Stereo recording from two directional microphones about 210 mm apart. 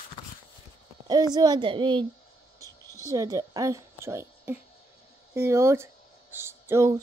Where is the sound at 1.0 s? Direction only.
20° right (ahead or behind).